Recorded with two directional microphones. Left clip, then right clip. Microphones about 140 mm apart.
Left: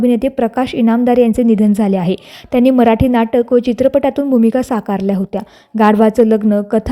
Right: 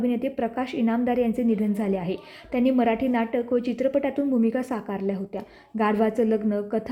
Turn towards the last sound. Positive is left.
turn(degrees=40)  # may be behind; listen again after turning